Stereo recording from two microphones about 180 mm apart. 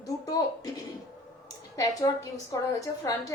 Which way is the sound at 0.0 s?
20° left (ahead or behind).